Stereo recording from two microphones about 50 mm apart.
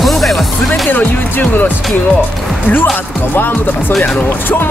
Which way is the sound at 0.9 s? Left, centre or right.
Left.